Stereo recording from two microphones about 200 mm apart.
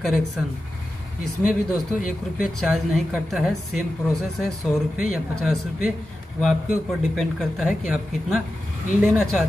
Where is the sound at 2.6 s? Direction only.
Centre (ahead or behind).